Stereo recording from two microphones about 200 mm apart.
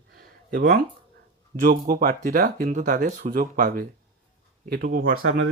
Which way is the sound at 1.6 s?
45° right (ahead or behind).